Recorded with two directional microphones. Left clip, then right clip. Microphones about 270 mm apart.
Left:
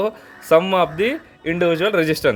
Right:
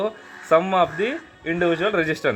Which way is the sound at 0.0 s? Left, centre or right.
Left.